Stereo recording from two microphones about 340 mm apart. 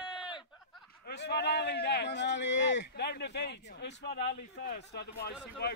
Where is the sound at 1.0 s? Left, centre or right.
Left.